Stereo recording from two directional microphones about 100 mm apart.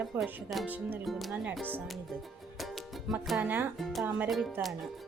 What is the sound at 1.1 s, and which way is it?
Speech, centre (ahead or behind).